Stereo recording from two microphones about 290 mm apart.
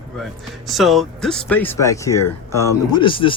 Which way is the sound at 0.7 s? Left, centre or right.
Centre.